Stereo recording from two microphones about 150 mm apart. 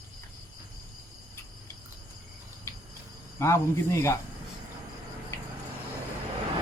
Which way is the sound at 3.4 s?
20° left (ahead or behind).